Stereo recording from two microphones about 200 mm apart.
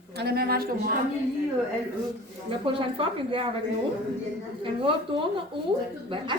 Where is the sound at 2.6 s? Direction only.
25° right (ahead or behind).